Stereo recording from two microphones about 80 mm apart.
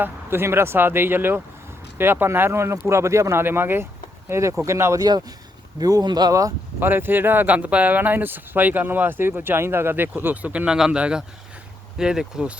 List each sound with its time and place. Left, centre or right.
0.0 s speech: right
5.8 s speech: right
6.7 s speech: right
10.5 s speech: centre